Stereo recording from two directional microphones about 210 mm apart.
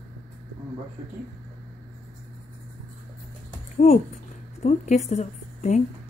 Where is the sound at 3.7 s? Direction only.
35° left (ahead or behind).